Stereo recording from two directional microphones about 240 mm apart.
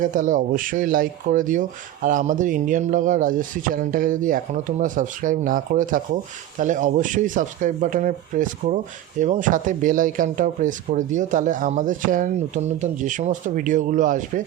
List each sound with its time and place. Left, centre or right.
0.0 s speech: right